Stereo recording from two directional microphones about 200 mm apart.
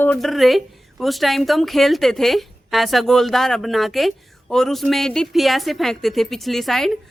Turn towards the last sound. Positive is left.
turn(degrees=0)  # may be behind; listen again after turning